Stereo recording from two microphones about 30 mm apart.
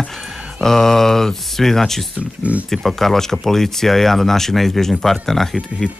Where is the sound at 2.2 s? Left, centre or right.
Right.